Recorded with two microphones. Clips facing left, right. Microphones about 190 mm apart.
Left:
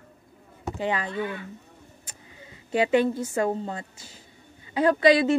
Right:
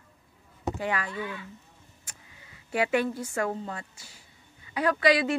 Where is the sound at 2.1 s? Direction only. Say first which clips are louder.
Left 5 dB; 25° left (ahead or behind).